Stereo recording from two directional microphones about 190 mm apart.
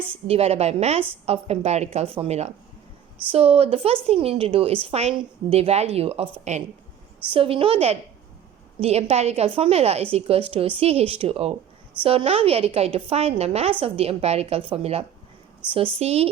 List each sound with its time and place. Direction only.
0.3 s a woman's voice: 35° right (ahead or behind)